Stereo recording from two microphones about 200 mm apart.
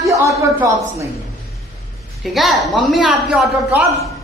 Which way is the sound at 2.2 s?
Centre (ahead or behind).